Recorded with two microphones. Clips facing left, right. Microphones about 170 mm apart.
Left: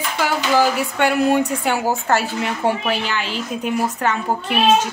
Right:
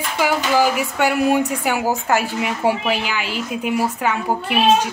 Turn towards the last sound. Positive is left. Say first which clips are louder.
# even
turn(degrees=-10)  # may be behind; listen again after turning